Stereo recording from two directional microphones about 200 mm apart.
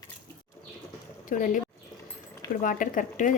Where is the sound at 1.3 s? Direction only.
40° left (ahead or behind).